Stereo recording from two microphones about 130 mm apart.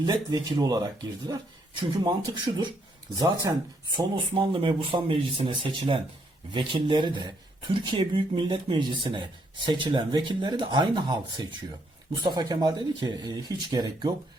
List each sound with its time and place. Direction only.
0.0 s speech: 30° right (ahead or behind)
3.9 s speech: 40° right (ahead or behind)